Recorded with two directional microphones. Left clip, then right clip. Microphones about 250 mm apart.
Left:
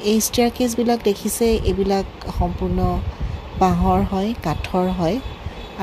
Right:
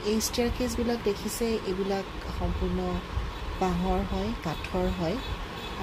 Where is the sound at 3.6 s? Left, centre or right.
Left.